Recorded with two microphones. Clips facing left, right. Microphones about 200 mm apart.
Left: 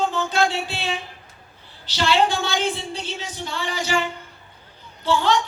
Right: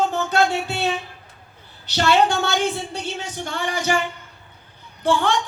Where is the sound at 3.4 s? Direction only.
50° right (ahead or behind).